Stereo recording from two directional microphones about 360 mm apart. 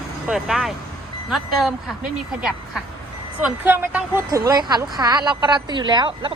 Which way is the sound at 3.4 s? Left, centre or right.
Centre.